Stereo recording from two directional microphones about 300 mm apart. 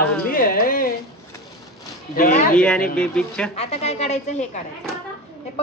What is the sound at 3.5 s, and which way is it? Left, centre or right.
A woman's voice, centre.